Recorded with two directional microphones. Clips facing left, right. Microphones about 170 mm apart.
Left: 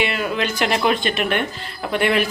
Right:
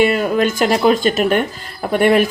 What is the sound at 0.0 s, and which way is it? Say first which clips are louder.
Speech: right 8 dB; 45° right (ahead or behind).